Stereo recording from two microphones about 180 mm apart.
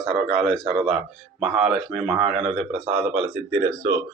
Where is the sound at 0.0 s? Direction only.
Centre (ahead or behind).